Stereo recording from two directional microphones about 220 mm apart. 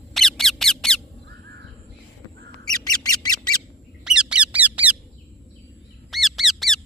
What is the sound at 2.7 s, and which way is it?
Squawk, 15° left (ahead or behind).